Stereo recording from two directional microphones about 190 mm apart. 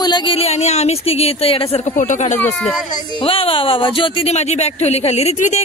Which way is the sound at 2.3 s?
10° left (ahead or behind).